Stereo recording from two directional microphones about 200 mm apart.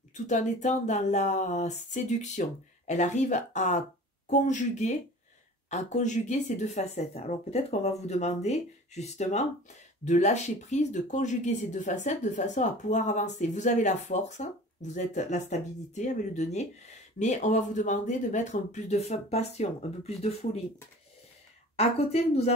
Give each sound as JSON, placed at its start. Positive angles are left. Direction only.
{"t": 0.1, "sound": "speech", "side_deg": 35}
{"t": 21.7, "sound": "speech", "side_deg": 30}